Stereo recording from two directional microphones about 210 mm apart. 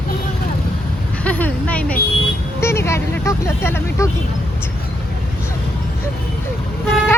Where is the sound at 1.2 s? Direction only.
5° left (ahead or behind).